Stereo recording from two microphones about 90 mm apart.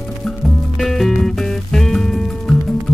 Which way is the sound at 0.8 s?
5° left (ahead or behind).